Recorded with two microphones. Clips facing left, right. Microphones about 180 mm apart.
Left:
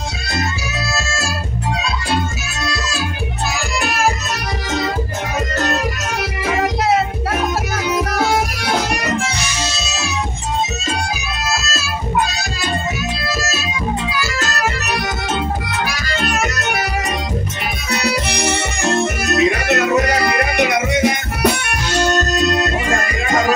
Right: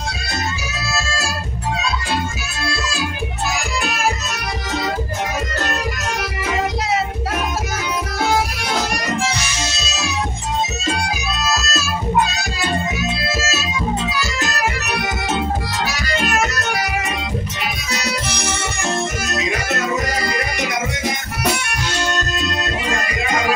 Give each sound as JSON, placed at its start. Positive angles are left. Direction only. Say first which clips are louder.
{"t": 14.1, "sound": "music", "louder": "left 1 dB", "side_deg": -15}
{"t": 15.8, "sound": "accordion", "louder": "even", "side_deg": -25}
{"t": 16.5, "sound": "music", "louder": "left 1 dB", "side_deg": 20}
{"t": 17.9, "sound": "music", "louder": "left 7 dB", "side_deg": 65}
{"t": 22.8, "sound": "music", "louder": "left 3 dB", "side_deg": 50}